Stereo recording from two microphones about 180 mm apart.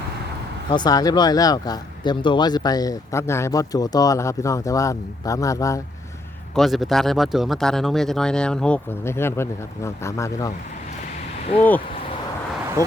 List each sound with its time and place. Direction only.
0.7 s speech: 25° left (ahead or behind)
6.5 s speech: centre (ahead or behind); by 10.5 s 15° left (ahead or behind)